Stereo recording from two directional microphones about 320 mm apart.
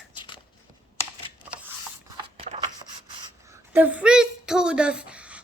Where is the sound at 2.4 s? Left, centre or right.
Centre.